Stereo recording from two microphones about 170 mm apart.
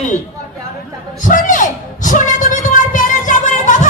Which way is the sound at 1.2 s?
50° left (ahead or behind).